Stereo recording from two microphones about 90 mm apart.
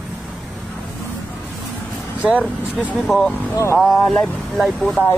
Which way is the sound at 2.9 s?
Centre (ahead or behind).